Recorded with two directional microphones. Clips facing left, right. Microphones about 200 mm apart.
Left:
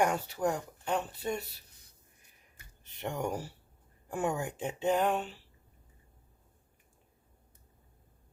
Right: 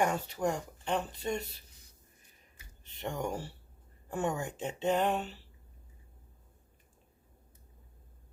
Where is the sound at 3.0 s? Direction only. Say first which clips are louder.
Left 1 dB; 10° left (ahead or behind).